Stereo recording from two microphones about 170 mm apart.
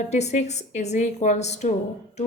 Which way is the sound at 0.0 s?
40° left (ahead or behind).